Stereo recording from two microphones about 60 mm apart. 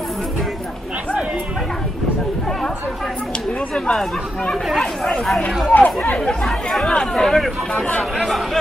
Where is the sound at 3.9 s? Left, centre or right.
Centre.